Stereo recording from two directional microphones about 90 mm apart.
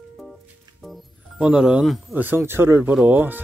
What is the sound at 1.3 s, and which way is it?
Speech, 10° right (ahead or behind).